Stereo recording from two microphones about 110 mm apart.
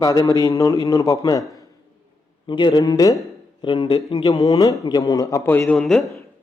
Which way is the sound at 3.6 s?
45° left (ahead or behind).